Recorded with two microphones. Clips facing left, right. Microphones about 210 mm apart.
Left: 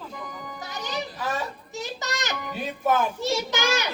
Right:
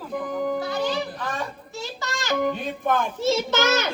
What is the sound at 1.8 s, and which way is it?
Child singing, 20° left (ahead or behind).